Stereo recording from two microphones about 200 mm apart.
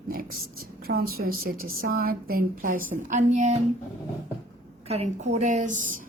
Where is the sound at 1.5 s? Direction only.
90° right.